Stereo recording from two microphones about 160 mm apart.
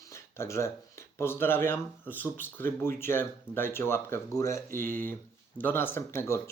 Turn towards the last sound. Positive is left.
turn(degrees=15)  # may be behind; listen again after turning